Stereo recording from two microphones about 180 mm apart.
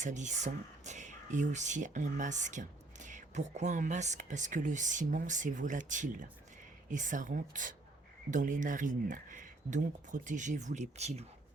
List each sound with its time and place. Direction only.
0.0 s speech: 40° right (ahead or behind)